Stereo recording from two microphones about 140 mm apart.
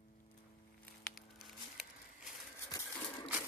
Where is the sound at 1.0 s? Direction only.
Centre (ahead or behind).